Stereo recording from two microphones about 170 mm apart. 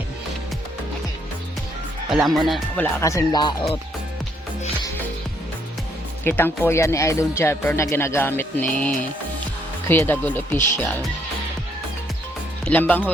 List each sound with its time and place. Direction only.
2.2 s speech: centre (ahead or behind)
2.8 s speech: 20° left (ahead or behind)
6.2 s speech: 15° left (ahead or behind)
9.9 s speech: 10° left (ahead or behind)
12.6 s speech: 10° left (ahead or behind)